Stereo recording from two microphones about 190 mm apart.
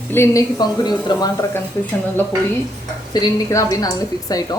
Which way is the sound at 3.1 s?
20° left (ahead or behind).